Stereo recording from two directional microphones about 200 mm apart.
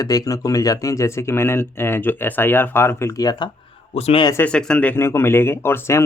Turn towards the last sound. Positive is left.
turn(degrees=10)  # may be behind; listen again after turning